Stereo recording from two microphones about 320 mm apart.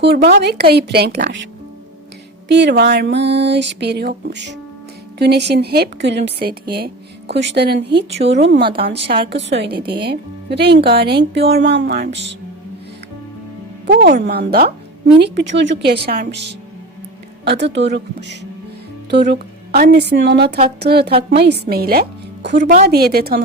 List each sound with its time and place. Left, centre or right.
0.0 s speech: right
2.5 s speech: right
13.8 s speech: right